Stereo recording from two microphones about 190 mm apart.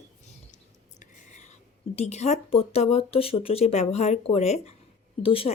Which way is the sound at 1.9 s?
35° left (ahead or behind).